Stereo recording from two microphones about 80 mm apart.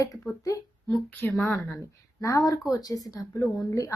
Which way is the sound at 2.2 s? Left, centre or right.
Left.